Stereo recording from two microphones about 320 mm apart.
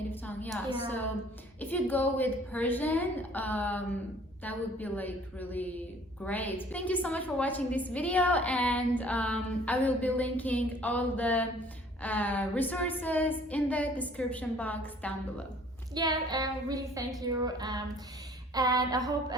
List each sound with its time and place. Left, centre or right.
0.1 s a woman's voice: centre
1.6 s a woman's voice: centre
16.0 s child singing: centre